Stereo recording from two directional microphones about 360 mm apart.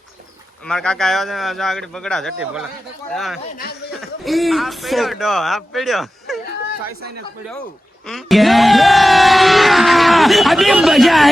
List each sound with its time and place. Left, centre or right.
0.6 s speech: centre
3.4 s speech: left
3.9 s speech: centre
8.0 s speech: centre